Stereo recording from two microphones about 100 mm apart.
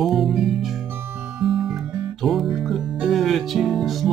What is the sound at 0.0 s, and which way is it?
Music, centre (ahead or behind).